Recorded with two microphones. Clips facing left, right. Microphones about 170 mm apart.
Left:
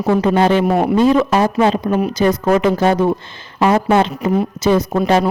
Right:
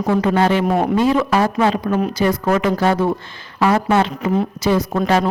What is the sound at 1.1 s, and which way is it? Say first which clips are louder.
A woman's voice: left 3 dB; 20° left (ahead or behind).